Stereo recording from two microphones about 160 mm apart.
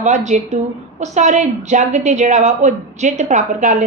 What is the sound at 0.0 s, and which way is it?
A woman's voice, 45° right (ahead or behind).